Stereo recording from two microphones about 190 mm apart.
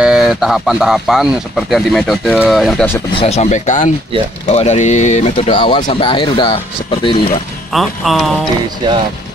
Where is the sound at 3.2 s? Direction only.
35° left (ahead or behind).